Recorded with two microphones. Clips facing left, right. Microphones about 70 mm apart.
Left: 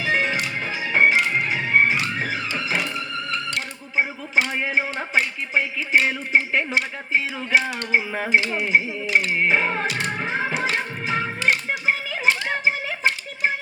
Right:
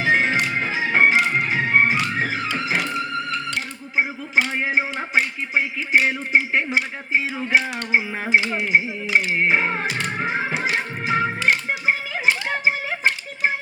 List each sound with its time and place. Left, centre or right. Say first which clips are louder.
0.0 s organ: right 3 dB; right
2.6 s music: right 2 dB; right
4.6 s a sound: right 1 dB; right
4.9 s speech: right 1 dB; centre
7.9 s a sound: right 1 dB; centre
10.2 s music: right 1 dB; centre